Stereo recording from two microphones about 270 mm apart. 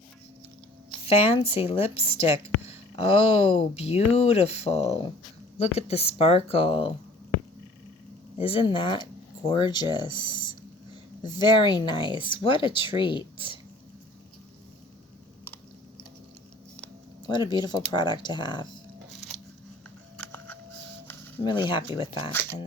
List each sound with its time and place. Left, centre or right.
1.0 s speech: left
8.4 s speech: centre
17.2 s speech: centre
20.1 s a sound: centre
21.4 s speech: centre